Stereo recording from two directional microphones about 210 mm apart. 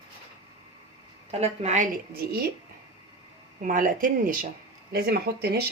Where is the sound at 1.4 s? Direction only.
30° right (ahead or behind); by 2.5 s 50° right (ahead or behind).